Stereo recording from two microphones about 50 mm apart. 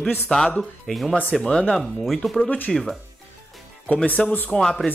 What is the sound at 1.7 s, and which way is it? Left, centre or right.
Speech, centre.